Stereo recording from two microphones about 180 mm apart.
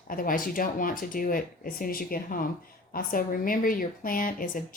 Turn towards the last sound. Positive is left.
turn(degrees=50)  # may be behind; listen again after turning